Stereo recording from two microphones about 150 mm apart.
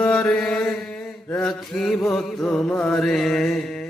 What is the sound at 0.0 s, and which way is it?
Mantra, 5° left (ahead or behind).